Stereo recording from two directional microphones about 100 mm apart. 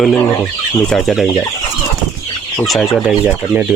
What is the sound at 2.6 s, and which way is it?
Speech, centre (ahead or behind).